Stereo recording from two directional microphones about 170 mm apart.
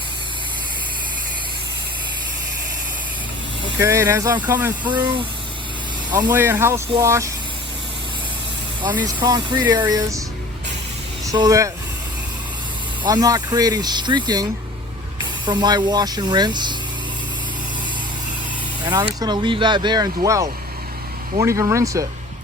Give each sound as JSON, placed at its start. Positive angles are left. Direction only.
{"t": 3.8, "sound": "speech", "side_deg": -15}
{"t": 6.3, "sound": "speech", "side_deg": -10}
{"t": 9.0, "sound": "speech", "side_deg": -20}
{"t": 11.3, "sound": "speech", "side_deg": -20}
{"t": 13.1, "sound": "speech", "side_deg": -20}
{"t": 15.4, "sound": "speech", "side_deg": -25}
{"t": 18.9, "sound": "speech", "side_deg": -25}